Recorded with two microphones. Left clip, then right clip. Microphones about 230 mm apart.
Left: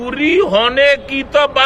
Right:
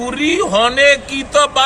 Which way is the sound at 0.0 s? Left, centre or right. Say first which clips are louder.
Left 2 dB; left.